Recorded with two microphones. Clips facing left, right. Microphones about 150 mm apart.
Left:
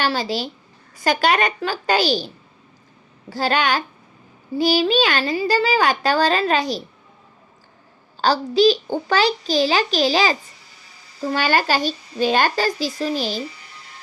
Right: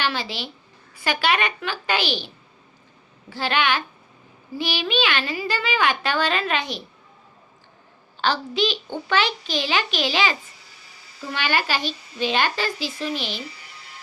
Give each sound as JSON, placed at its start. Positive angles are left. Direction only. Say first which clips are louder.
{"t": 0.0, "sound": "a child's voice", "louder": "left 5 dB", "side_deg": 40}
{"t": 8.2, "sound": "a child's voice", "louder": "left 7 dB", "side_deg": 40}